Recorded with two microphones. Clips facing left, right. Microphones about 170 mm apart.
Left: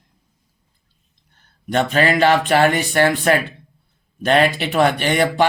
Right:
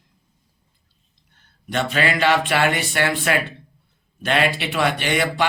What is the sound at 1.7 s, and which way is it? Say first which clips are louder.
Speech: left 5 dB; 45° left (ahead or behind).